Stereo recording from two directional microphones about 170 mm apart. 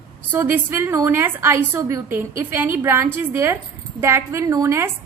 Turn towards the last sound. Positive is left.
turn(degrees=-15)  # may be behind; listen again after turning